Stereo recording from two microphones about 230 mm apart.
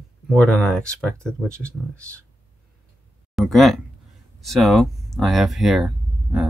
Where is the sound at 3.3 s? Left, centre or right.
Centre.